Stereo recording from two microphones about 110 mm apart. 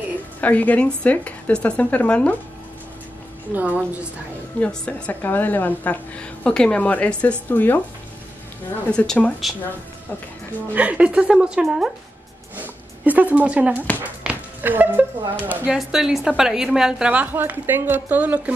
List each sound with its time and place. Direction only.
0.4 s a woman's voice: 15° left (ahead or behind)
3.5 s a woman's voice: 10° right (ahead or behind)
4.6 s a woman's voice: 10° left (ahead or behind)
8.9 s a woman's voice: 5° left (ahead or behind)
10.7 s a woman's voice: 15° right (ahead or behind)
12.5 s a sound: 15° right (ahead or behind)
14.0 s speech: 15° right (ahead or behind)
15.6 s a woman's voice: 5° right (ahead or behind)